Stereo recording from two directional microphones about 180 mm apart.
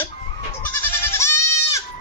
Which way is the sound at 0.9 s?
15° left (ahead or behind).